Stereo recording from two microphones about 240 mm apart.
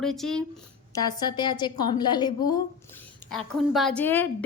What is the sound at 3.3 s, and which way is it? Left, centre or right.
Speech, centre.